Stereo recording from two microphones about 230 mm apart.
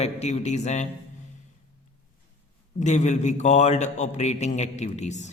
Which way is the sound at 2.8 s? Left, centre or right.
Left.